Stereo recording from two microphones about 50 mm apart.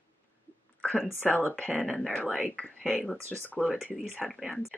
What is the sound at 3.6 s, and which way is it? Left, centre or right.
Speech, centre.